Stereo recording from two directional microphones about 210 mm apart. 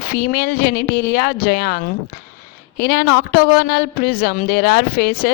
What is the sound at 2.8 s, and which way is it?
A woman's voice, 50° left (ahead or behind).